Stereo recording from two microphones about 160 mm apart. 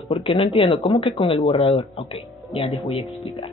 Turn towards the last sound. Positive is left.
turn(degrees=35)  # may be behind; listen again after turning